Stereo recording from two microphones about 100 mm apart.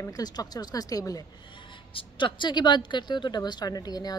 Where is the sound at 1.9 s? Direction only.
60° left (ahead or behind).